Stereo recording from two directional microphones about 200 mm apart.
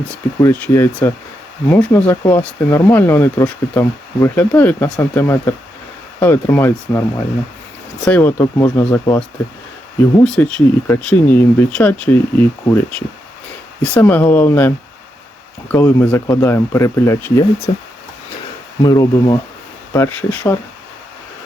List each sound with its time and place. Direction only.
0.1 s speech: 5° left (ahead or behind)
8.0 s speech: 10° left (ahead or behind)
10.2 s speech: 5° left (ahead or behind)
13.8 s speech: 10° left (ahead or behind)
15.7 s speech: 10° left (ahead or behind)